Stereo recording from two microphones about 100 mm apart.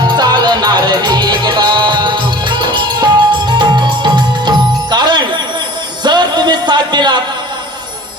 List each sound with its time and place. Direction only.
0.0 s music: 45° right (ahead or behind)